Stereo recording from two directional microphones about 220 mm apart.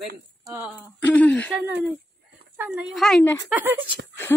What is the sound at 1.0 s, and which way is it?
Speech, 5° left (ahead or behind).